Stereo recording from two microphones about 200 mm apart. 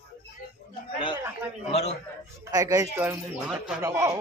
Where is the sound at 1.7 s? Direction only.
30° left (ahead or behind).